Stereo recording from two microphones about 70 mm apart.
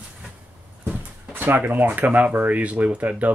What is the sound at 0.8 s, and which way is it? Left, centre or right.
Speech, right.